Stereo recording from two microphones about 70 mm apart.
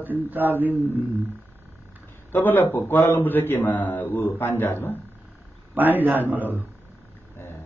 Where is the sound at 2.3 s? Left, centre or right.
Left.